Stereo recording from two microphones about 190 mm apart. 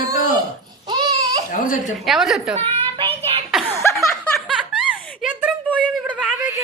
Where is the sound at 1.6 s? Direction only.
45° left (ahead or behind).